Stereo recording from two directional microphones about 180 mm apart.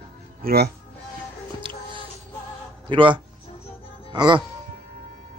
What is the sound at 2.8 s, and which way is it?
Speech, 30° right (ahead or behind).